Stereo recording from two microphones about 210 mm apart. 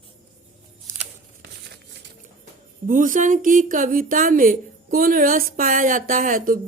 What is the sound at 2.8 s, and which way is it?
Speech, 40° right (ahead or behind).